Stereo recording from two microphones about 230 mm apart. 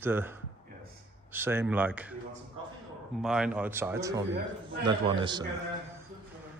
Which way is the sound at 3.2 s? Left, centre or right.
Centre.